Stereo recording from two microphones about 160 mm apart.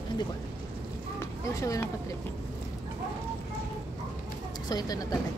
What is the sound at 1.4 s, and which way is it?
Speech, 20° left (ahead or behind).